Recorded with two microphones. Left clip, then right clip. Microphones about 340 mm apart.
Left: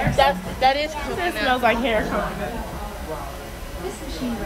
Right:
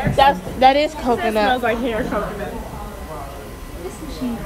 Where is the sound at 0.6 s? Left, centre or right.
Centre.